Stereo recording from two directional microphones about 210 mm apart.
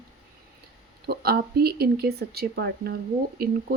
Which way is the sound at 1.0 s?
45° right (ahead or behind).